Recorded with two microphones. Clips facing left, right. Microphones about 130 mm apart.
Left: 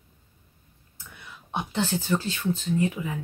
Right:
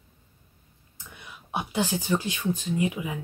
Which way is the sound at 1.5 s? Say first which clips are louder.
Even; 10° right (ahead or behind).